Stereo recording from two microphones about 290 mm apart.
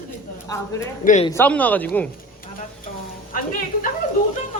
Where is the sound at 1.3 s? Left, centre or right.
Centre.